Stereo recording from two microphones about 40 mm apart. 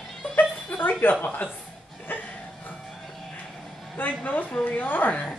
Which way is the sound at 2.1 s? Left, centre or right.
Left.